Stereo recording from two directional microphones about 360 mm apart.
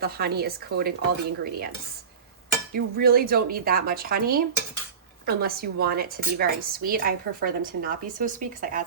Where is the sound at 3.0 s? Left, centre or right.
Right.